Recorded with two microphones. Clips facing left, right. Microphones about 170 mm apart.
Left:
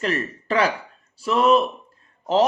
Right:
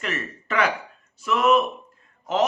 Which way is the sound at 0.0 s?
35° left (ahead or behind).